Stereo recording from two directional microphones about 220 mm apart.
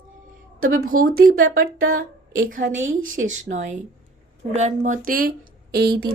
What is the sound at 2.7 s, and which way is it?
Speech, 60° right (ahead or behind).